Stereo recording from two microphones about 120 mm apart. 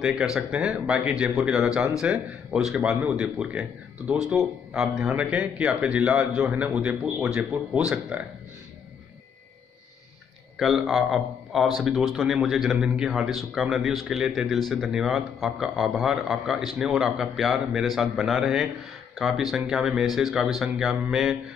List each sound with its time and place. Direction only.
0.0 s speech: 5° right (ahead or behind)
10.6 s a man's voice: centre (ahead or behind)